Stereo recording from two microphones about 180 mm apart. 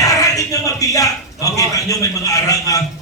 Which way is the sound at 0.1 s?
20° left (ahead or behind).